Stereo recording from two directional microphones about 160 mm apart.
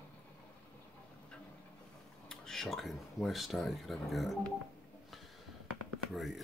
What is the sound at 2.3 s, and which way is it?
Speech, 5° left (ahead or behind).